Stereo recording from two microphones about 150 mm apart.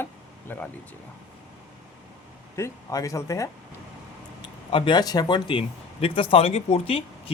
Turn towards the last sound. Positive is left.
turn(degrees=40)  # may be behind; listen again after turning